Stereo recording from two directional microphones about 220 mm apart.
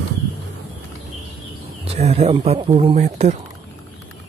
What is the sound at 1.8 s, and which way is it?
Speech, 30° right (ahead or behind).